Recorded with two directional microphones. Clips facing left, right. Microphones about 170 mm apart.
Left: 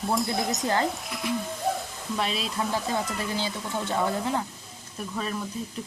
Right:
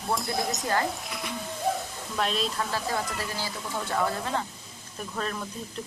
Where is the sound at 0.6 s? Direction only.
20° left (ahead or behind).